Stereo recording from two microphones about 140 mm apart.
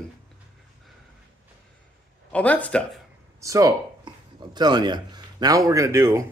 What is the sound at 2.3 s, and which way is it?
Speech, 10° left (ahead or behind).